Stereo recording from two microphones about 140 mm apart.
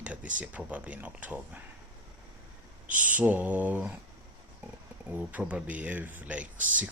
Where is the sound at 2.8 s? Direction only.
65° right (ahead or behind).